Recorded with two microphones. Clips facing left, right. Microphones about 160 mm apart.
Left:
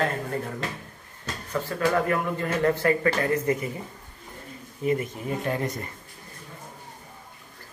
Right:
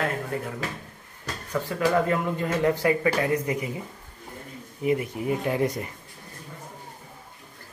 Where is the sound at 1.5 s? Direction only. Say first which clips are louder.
Right 1 dB; 10° right (ahead or behind).